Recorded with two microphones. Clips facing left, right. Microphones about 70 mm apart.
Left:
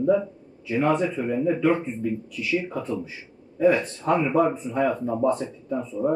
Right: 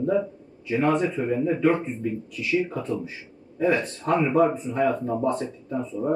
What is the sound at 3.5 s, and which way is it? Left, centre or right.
Speech, centre.